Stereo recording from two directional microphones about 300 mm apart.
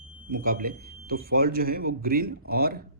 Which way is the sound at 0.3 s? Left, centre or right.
Right.